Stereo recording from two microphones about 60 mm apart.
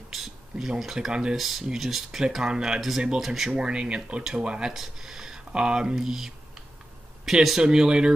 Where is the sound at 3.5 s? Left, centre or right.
Centre.